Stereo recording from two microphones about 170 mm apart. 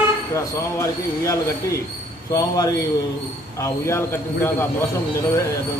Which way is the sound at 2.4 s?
20° left (ahead or behind).